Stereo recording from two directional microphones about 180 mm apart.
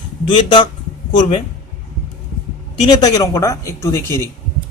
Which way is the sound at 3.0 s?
20° left (ahead or behind).